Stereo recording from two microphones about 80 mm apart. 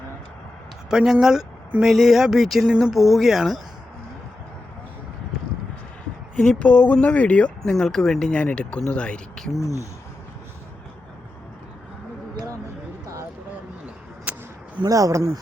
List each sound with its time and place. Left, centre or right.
0.9 s speech: centre
6.3 s speech: centre
9.6 s speech: left
14.3 s a sound: centre
14.8 s speech: right